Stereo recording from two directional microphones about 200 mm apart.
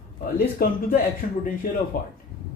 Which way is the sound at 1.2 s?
45° left (ahead or behind).